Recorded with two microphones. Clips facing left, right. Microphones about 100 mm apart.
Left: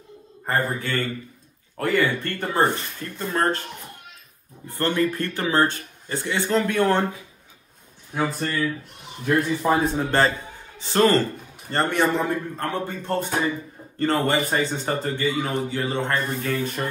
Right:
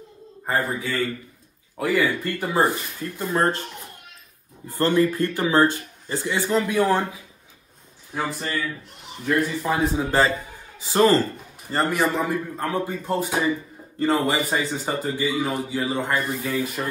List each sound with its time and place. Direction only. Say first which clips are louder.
0.5 s a man's voice: even; 5° right (ahead or behind)
4.6 s a man's voice: right 3 dB; 15° right (ahead or behind)
8.1 s speech: left 3 dB; centre (ahead or behind)
9.7 s a man's voice: left 3 dB; 5° right (ahead or behind)